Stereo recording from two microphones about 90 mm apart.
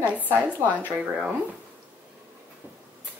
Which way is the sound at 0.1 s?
15° right (ahead or behind).